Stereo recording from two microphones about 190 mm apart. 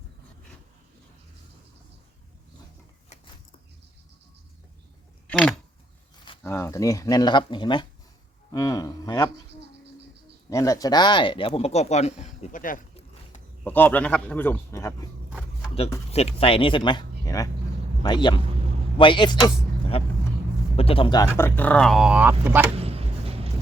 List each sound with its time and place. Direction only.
5.3 s a man's voice: 5° left (ahead or behind)
10.5 s speech: 15° left (ahead or behind); by 12.8 s 45° left (ahead or behind)
13.7 s a man's voice: 10° left (ahead or behind)
16.1 s speech: 30° left (ahead or behind)
21.3 s speech: 10° left (ahead or behind); by 22.6 s 10° right (ahead or behind)
22.7 s a sound: 30° right (ahead or behind)